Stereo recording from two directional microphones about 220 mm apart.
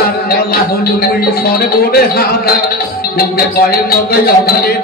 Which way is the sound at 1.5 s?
45° left (ahead or behind).